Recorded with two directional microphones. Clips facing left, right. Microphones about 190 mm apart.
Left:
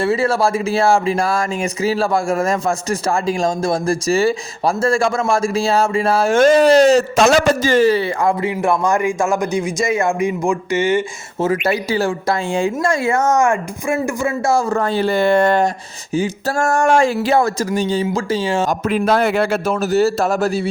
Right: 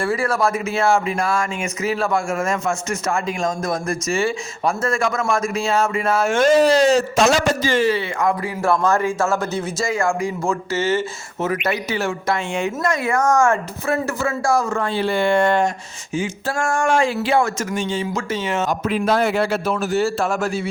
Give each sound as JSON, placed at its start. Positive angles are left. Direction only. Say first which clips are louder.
{"t": 0.0, "sound": "speech", "louder": "left 4 dB", "side_deg": 25}
{"t": 6.4, "sound": "a man's voice", "louder": "left 4 dB", "side_deg": 65}
{"t": 7.7, "sound": "speech", "louder": "left 5 dB", "side_deg": 40}
{"t": 11.3, "sound": "speech", "louder": "left 4 dB", "side_deg": 30}
{"t": 18.7, "sound": "a man's voice", "louder": "left 1 dB", "side_deg": 50}